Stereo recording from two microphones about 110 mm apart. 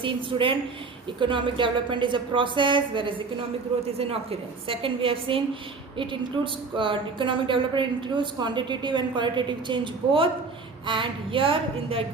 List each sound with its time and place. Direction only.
0.0 s a woman's voice: 50° right (ahead or behind)
3.9 s a woman's voice: 60° right (ahead or behind)